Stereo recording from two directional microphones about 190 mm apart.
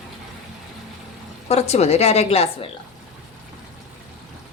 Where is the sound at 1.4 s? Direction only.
35° left (ahead or behind).